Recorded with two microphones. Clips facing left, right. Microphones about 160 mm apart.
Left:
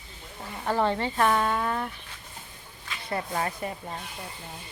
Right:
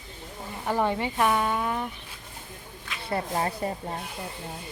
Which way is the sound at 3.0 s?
30° right (ahead or behind).